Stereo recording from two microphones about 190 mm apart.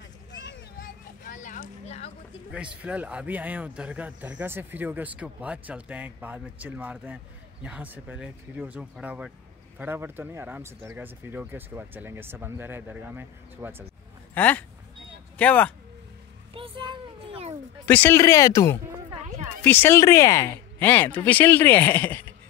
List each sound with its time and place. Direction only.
0.3 s vehicle: 70° left (ahead or behind)
0.7 s a sound: 45° left (ahead or behind)
2.5 s a man's voice: 5° right (ahead or behind)
14.3 s speech: 10° left (ahead or behind)
16.5 s a sound: 25° right (ahead or behind)
17.8 s speech: 10° left (ahead or behind)